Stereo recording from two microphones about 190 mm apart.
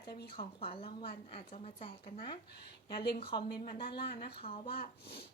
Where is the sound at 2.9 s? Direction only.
55° left (ahead or behind).